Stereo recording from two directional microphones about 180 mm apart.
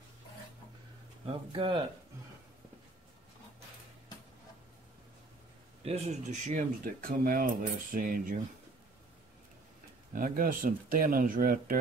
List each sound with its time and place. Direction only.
1.2 s speech: 25° right (ahead or behind)
5.9 s speech: 40° right (ahead or behind)
10.1 s speech: 50° right (ahead or behind)